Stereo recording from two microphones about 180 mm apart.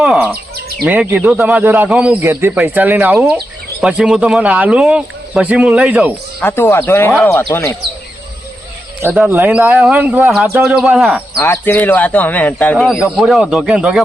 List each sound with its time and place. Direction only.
0.0 s bird: 5° right (ahead or behind)
0.5 s bird: 60° right (ahead or behind)
0.9 s a man's voice: 10° right (ahead or behind)
6.4 s speech: 10° left (ahead or behind)
9.1 s a man's voice: 10° right (ahead or behind)
11.3 s speech: 10° left (ahead or behind)
12.7 s speech: 5° right (ahead or behind)